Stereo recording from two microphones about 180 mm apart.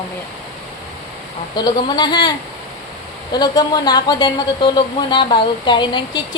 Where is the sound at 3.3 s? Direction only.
20° left (ahead or behind).